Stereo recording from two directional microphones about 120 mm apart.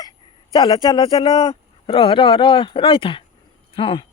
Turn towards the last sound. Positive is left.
turn(degrees=50)  # may be behind; listen again after turning